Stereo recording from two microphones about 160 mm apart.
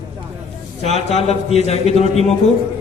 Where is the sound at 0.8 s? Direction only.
40° left (ahead or behind).